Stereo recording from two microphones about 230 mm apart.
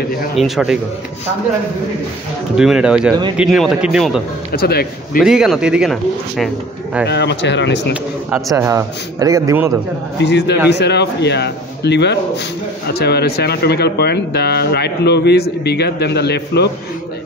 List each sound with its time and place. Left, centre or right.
0.4 s a man's voice: centre
2.5 s a man's voice: centre
4.5 s speech: left
5.2 s a man's voice: centre
7.1 s speech: left
8.3 s a man's voice: centre
10.1 s speech: left